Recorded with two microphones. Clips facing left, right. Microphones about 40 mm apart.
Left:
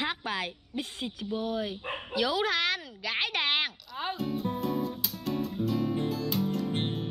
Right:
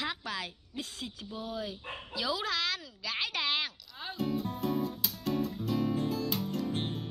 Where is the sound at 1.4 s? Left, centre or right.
Left.